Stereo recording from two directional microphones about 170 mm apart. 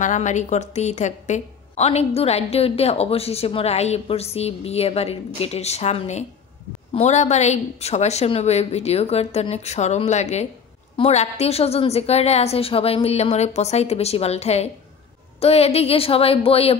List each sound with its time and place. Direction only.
0.0 s a woman's voice: 45° left (ahead or behind)